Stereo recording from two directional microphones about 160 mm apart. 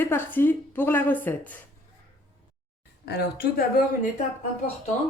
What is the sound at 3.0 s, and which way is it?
Speech, 90° left.